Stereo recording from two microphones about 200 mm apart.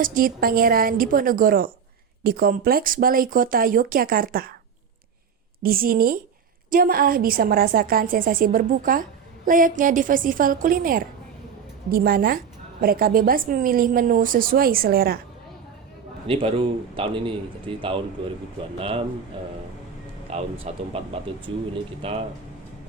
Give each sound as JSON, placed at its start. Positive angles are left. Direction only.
{"t": 0.0, "sound": "a woman's voice", "side_deg": -45}
{"t": 5.6, "sound": "a woman's voice", "side_deg": -45}
{"t": 16.2, "sound": "a man's voice", "side_deg": -30}
{"t": 20.3, "sound": "a man's voice", "side_deg": -30}